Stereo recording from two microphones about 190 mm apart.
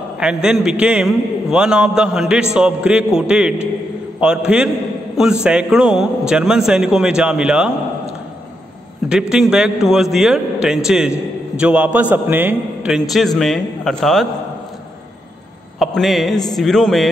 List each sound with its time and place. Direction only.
0.2 s a man's voice: 5° right (ahead or behind)
9.3 s a man's voice: 5° right (ahead or behind)
15.8 s a man's voice: centre (ahead or behind)